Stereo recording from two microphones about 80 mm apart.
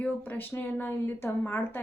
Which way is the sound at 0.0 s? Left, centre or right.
Left.